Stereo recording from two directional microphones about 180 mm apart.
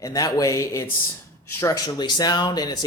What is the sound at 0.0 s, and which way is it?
Speech, 20° left (ahead or behind).